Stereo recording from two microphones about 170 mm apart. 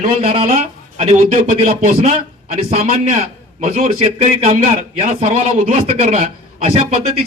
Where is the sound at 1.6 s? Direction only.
55° right (ahead or behind).